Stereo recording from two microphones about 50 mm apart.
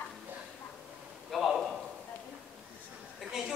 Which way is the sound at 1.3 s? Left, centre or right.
Centre.